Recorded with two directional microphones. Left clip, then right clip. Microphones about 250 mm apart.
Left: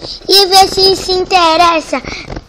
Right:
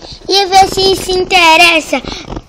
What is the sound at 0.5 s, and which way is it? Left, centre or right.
Child singing, centre.